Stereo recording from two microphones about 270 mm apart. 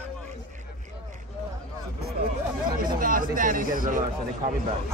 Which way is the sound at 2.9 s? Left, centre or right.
Right.